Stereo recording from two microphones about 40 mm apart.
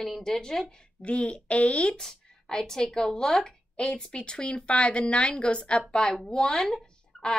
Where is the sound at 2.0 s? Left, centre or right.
Centre.